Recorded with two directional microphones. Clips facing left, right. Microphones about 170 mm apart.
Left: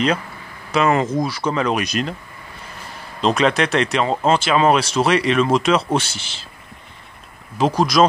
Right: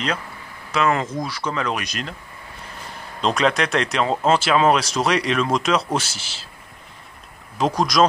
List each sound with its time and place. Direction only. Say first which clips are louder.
0.7 s speech: left 4 dB; 20° left (ahead or behind)
3.2 s speech: left 3 dB; centre (ahead or behind)
7.5 s speech: left 3 dB; centre (ahead or behind)